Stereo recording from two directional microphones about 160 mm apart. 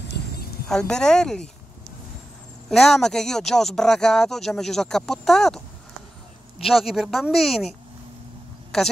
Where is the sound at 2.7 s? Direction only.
Centre (ahead or behind).